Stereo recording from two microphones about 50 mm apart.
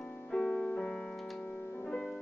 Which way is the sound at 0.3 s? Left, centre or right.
Centre.